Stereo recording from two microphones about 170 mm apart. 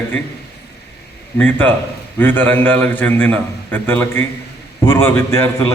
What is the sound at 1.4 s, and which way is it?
A man's voice, 10° left (ahead or behind).